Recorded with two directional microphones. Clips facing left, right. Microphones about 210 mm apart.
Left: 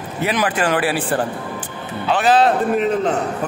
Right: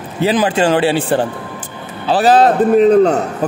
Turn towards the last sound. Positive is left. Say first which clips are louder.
# right 9 dB
turn(degrees=-40)  # may be behind; listen again after turning